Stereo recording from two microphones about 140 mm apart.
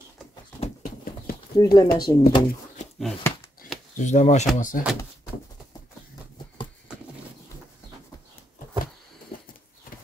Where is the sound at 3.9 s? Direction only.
60° left (ahead or behind).